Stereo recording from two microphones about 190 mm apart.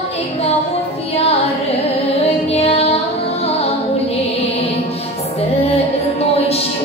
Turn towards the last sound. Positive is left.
turn(degrees=30)  # may be behind; listen again after turning